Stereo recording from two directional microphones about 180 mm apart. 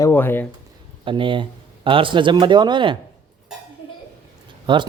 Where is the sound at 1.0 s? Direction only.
30° right (ahead or behind).